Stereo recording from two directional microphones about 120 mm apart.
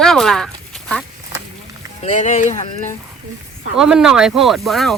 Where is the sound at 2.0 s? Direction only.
80° left.